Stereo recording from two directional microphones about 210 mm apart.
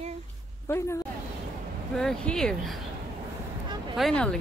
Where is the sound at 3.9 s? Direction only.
Centre (ahead or behind).